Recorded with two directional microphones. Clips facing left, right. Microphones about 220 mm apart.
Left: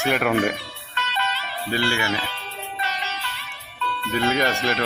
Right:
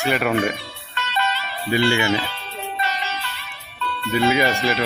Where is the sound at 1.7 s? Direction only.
20° right (ahead or behind).